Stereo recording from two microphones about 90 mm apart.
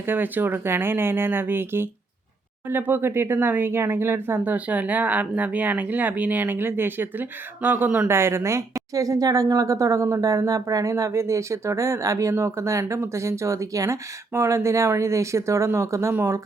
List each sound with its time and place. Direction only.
0.0 s a woman's voice: 20° right (ahead or behind)